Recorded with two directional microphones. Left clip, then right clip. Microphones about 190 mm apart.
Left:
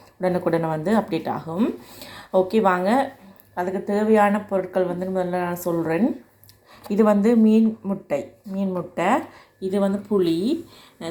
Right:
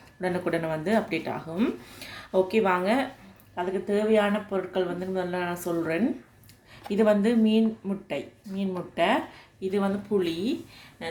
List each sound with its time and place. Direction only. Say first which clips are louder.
0.2 s speech: left 6 dB; 15° left (ahead or behind)